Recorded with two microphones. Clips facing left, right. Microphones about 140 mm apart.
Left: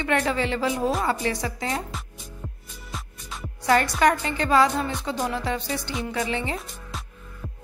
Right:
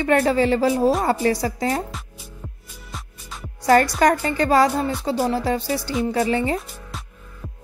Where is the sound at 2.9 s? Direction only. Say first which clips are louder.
Even; centre (ahead or behind).